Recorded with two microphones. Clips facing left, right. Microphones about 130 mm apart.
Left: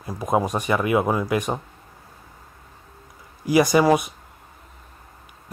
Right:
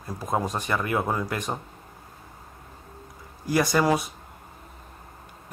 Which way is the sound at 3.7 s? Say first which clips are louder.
Left 5 dB; 15° left (ahead or behind).